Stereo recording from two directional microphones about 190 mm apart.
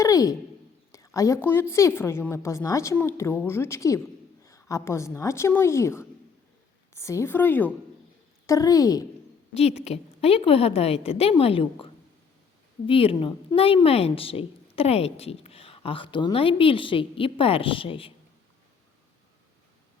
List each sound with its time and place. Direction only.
0.0 s a sound: 20° left (ahead or behind)
0.9 s a woman's voice: 15° left (ahead or behind)
9.6 s a woman's voice: 35° left (ahead or behind)